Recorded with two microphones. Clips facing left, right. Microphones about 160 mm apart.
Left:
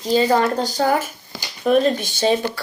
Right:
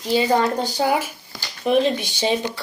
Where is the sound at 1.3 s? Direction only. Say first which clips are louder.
Left 3 dB; 25° left (ahead or behind).